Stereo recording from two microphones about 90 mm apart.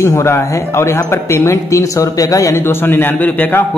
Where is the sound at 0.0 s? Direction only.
30° left (ahead or behind).